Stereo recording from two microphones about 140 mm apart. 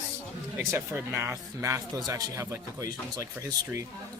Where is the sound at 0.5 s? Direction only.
15° right (ahead or behind).